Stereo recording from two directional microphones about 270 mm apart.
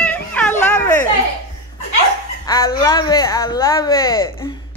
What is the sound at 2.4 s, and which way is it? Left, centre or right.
Speech, centre.